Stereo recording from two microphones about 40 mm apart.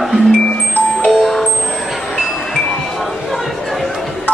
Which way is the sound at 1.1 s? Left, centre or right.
Centre.